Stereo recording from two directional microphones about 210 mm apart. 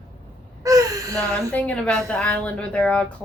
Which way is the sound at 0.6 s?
15° right (ahead or behind).